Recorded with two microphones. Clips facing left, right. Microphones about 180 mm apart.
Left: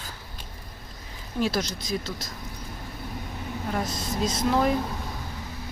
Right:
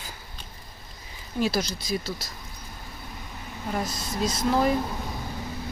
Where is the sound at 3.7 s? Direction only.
Centre (ahead or behind).